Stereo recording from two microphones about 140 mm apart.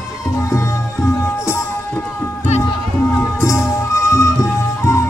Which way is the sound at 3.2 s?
20° left (ahead or behind).